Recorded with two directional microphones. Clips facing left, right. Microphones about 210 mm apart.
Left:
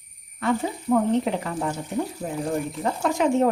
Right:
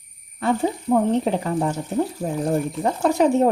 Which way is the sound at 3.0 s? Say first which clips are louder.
Right 3 dB; 35° right (ahead or behind).